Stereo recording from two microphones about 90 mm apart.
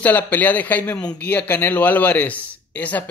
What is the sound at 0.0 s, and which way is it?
Speech, 20° left (ahead or behind).